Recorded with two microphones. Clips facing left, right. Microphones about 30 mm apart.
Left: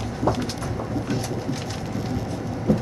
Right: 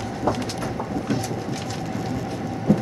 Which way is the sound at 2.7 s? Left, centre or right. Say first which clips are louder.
Right 2 dB; centre.